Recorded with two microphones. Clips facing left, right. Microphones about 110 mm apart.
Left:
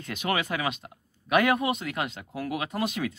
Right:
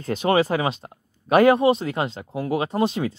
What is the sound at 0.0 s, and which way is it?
Speech, 35° right (ahead or behind).